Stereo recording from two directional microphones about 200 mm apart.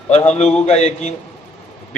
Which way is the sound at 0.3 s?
35° left (ahead or behind).